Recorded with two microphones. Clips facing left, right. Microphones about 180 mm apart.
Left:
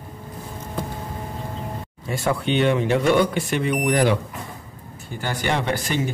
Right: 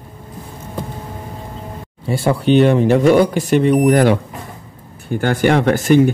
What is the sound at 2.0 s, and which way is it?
Speech, 30° right (ahead or behind).